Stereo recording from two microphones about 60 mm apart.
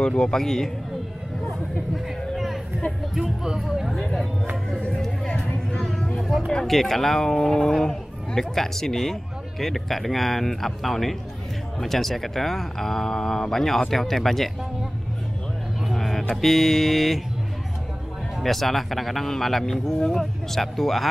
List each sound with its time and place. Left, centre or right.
0.0 s a man's voice: centre
2.3 s a sound: centre
3.2 s speech: centre
5.3 s music: left
6.1 s a sound: centre
6.5 s speech: centre
15.8 s speech: centre
18.4 s speech: centre